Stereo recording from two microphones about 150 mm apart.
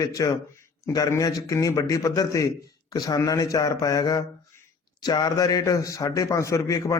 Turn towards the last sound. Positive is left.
turn(degrees=20)  # may be behind; listen again after turning